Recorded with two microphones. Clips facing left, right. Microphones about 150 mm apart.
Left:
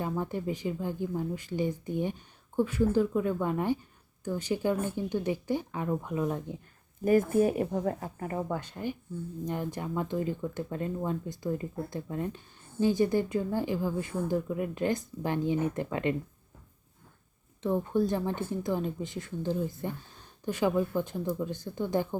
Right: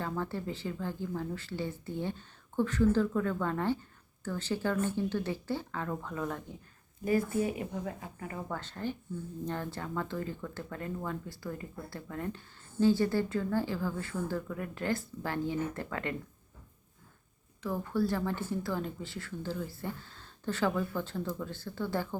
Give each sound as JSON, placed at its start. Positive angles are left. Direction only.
{"t": 0.0, "sound": "speech", "side_deg": 15}
{"t": 7.0, "sound": "speech", "side_deg": 50}
{"t": 8.4, "sound": "speech", "side_deg": 15}
{"t": 17.6, "sound": "speech", "side_deg": 25}